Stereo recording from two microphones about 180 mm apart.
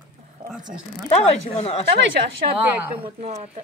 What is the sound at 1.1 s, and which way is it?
Speech, 35° left (ahead or behind).